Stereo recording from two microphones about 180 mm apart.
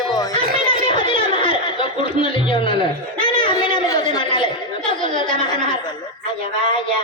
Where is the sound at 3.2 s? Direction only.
25° left (ahead or behind).